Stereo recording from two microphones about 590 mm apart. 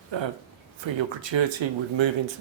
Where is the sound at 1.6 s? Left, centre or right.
Right.